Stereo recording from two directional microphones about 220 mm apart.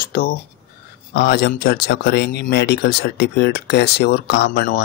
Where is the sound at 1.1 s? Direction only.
45° left (ahead or behind).